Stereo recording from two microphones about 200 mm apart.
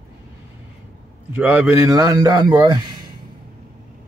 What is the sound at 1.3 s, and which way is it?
A man's voice, 10° right (ahead or behind).